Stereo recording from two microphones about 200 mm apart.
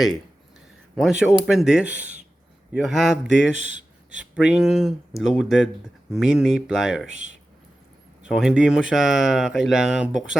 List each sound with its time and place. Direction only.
0.9 s speech: centre (ahead or behind)
3.2 s speech: 70° left (ahead or behind)
4.2 s speech: 5° right (ahead or behind)
8.2 s speech: 5° right (ahead or behind)